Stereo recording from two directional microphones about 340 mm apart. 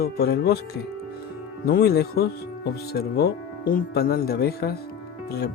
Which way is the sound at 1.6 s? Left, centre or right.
Left.